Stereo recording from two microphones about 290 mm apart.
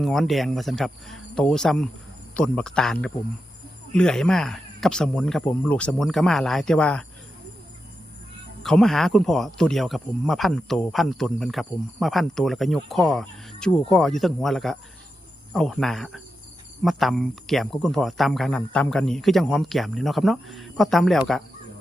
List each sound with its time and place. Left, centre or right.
0.0 s speech: centre
8.6 s speech: centre